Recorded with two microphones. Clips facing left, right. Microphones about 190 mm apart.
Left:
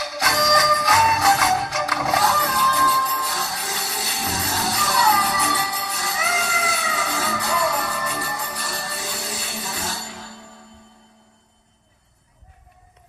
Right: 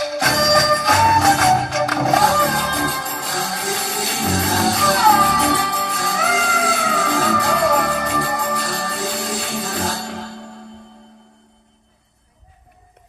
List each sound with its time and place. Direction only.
0.0 s music: 50° right (ahead or behind)